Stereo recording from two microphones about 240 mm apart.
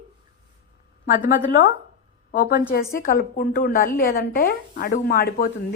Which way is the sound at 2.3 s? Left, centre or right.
Left.